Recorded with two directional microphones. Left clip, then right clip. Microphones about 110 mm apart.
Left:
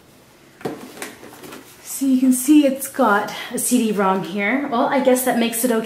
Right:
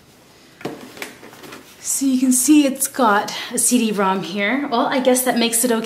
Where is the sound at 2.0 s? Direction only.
25° right (ahead or behind).